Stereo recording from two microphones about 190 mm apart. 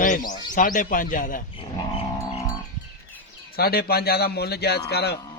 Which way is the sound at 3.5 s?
55° left (ahead or behind).